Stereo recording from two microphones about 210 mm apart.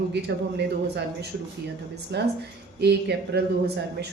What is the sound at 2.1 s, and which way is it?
Speech, 50° right (ahead or behind).